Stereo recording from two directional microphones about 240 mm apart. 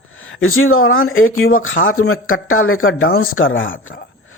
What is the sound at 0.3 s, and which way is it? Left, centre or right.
Speech, left.